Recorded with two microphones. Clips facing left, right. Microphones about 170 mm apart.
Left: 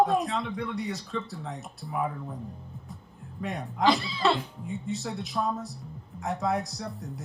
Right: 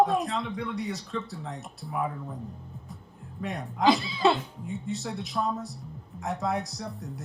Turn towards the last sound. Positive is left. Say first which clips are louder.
# even
turn(degrees=0)  # may be behind; listen again after turning